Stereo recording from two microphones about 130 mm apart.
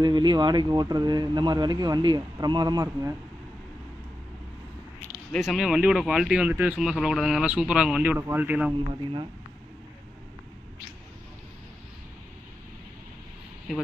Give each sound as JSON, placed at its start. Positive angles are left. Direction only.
{"t": 0.0, "sound": "speech", "side_deg": -35}
{"t": 5.4, "sound": "a man's voice", "side_deg": 0}
{"t": 8.7, "sound": "speech", "side_deg": -40}
{"t": 13.7, "sound": "speech", "side_deg": -5}